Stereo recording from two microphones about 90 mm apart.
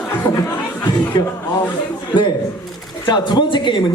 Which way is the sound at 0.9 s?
50° left (ahead or behind).